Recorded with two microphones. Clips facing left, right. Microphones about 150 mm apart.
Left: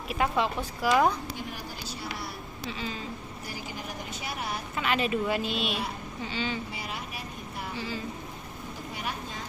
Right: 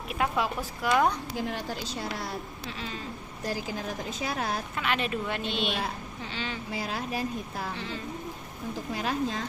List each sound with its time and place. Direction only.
0.1 s speech: centre (ahead or behind)
1.4 s speech: 90° right
2.6 s speech: centre (ahead or behind)
4.1 s speech: 90° right
4.8 s speech: centre (ahead or behind)
6.7 s speech: 90° right
7.8 s speech: 5° left (ahead or behind)
8.9 s speech: 90° right